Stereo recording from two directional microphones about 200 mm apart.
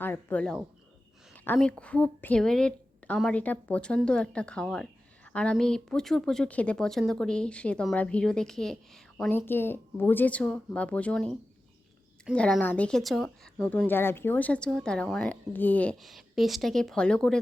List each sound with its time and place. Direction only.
0.0 s a woman's voice: 10° left (ahead or behind)